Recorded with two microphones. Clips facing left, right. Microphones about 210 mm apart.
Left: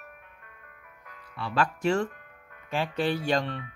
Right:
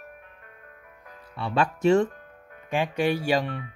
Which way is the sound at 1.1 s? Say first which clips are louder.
Right 4 dB; 25° right (ahead or behind).